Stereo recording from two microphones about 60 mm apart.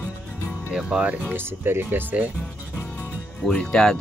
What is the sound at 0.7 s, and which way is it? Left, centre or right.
Speech, centre.